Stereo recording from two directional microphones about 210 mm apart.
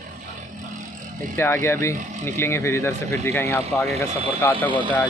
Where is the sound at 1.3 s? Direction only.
10° left (ahead or behind).